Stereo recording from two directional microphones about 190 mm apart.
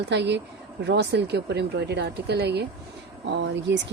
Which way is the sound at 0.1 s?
65° right (ahead or behind).